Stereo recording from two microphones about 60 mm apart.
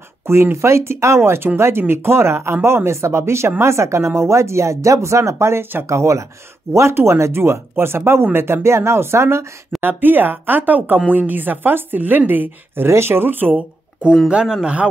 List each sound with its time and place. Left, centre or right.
0.3 s speech: right
9.8 s speech: right
14.3 s speech: centre